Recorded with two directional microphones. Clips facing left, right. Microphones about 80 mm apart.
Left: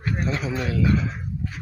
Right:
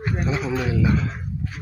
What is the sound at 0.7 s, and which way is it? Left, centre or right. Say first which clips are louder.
Speech: left 1 dB; centre.